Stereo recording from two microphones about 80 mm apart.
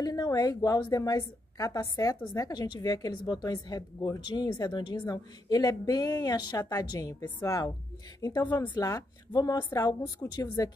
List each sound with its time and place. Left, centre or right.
0.0 s a woman's voice: left
8.5 s a woman's voice: left